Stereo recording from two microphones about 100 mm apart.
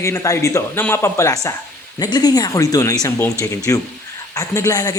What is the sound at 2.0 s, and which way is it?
Speech, 40° left (ahead or behind).